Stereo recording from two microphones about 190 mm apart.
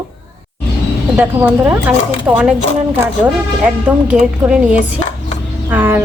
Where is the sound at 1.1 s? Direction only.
10° right (ahead or behind).